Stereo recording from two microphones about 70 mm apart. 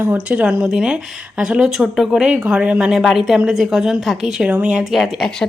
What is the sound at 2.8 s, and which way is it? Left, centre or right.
A woman's voice, centre.